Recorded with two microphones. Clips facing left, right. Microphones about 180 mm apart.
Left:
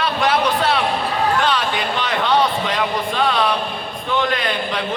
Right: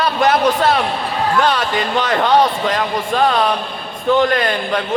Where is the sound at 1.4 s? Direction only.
40° right (ahead or behind).